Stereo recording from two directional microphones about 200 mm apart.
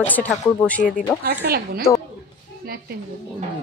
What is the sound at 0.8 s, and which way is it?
Speech, 40° left (ahead or behind).